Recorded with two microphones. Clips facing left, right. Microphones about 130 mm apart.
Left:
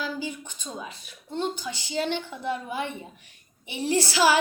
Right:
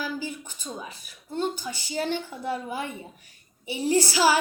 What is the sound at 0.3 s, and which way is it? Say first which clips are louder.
Speech: even; 5° right (ahead or behind).